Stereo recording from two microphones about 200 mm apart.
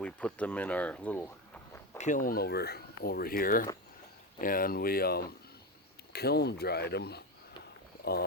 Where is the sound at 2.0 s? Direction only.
40° left (ahead or behind).